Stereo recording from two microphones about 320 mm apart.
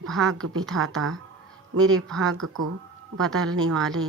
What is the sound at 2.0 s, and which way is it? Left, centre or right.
Speech, centre.